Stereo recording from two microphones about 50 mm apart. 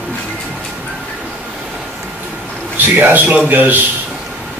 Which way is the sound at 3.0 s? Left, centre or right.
Right.